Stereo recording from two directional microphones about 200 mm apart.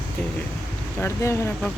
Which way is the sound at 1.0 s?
15° left (ahead or behind).